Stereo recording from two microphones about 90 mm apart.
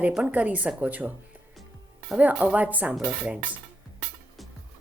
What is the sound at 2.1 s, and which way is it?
Speech, 15° right (ahead or behind).